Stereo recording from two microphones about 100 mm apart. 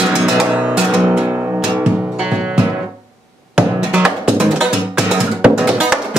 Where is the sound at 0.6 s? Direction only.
15° right (ahead or behind).